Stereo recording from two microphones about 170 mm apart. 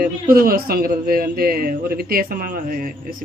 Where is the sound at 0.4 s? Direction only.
60° right (ahead or behind).